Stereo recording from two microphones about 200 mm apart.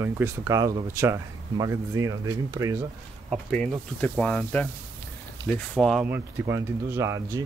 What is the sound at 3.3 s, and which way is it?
Speech, 5° left (ahead or behind).